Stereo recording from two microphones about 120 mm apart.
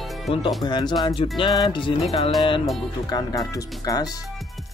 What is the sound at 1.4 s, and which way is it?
Music, 40° left (ahead or behind).